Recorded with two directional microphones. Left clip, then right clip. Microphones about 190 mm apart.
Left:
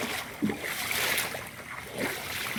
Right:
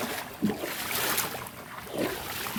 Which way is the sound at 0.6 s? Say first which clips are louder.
Left 3 dB; 60° right (ahead or behind).